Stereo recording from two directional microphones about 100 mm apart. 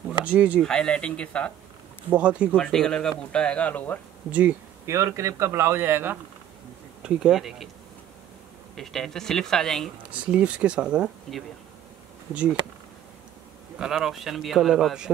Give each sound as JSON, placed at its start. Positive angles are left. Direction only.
{"t": 0.2, "sound": "speech", "side_deg": -15}
{"t": 0.6, "sound": "speech", "side_deg": 5}
{"t": 2.0, "sound": "speech", "side_deg": -15}
{"t": 2.5, "sound": "speech", "side_deg": 10}
{"t": 4.3, "sound": "speech", "side_deg": -15}
{"t": 4.8, "sound": "speech", "side_deg": -30}
{"t": 7.0, "sound": "speech", "side_deg": -5}
{"t": 8.7, "sound": "speech", "side_deg": 5}
{"t": 10.1, "sound": "speech", "side_deg": -10}
{"t": 13.7, "sound": "speech", "side_deg": -5}